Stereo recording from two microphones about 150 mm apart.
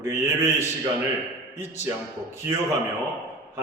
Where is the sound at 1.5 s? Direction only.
15° right (ahead or behind).